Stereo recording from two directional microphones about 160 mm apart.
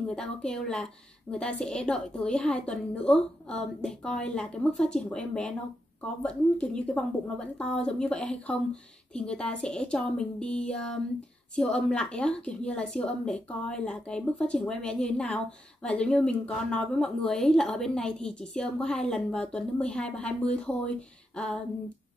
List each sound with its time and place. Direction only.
0.1 s a woman's voice: 5° left (ahead or behind)